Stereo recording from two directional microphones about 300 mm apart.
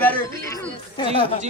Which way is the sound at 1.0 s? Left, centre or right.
Centre.